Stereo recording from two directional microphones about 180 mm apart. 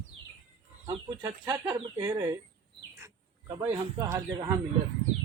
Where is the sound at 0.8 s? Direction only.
20° right (ahead or behind).